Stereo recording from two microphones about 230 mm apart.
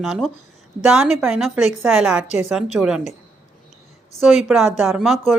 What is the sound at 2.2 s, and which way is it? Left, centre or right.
Speech, left.